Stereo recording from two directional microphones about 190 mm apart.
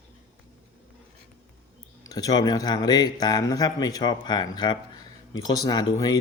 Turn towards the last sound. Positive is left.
turn(degrees=20)  # may be behind; listen again after turning